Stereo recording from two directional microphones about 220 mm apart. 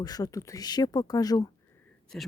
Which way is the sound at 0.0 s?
15° left (ahead or behind).